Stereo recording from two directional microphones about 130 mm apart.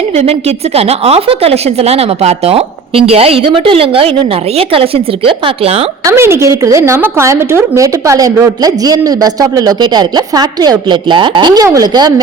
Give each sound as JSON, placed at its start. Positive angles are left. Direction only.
{"t": 0.2, "sound": "a woman's voice", "side_deg": -50}
{"t": 6.1, "sound": "a woman's voice", "side_deg": -20}